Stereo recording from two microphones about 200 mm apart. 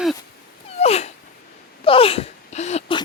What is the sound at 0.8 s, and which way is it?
Dog, 30° left (ahead or behind).